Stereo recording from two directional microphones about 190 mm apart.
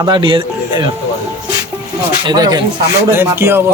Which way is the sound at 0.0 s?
25° right (ahead or behind).